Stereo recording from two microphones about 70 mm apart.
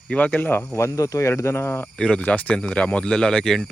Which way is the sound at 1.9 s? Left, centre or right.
Centre.